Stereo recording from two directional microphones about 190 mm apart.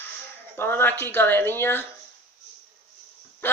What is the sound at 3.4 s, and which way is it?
Speech, 10° left (ahead or behind).